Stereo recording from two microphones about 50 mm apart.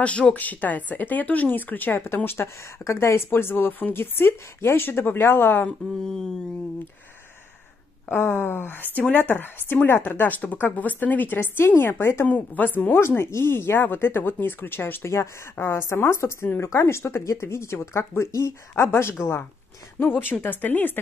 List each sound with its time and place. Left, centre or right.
0.0 s speech: left
2.8 s speech: left
3.3 s speech: left
5.7 s speech: centre
8.1 s speech: left
12.3 s speech: left
13.2 s speech: left
16.6 s speech: left
20.1 s speech: left